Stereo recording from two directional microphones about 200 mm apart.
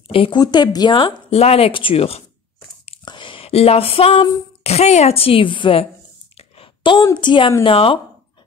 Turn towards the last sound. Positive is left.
turn(degrees=25)  # may be behind; listen again after turning